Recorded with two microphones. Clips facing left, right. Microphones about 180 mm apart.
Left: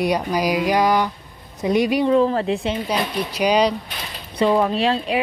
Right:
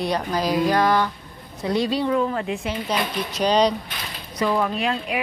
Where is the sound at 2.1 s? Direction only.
35° left (ahead or behind).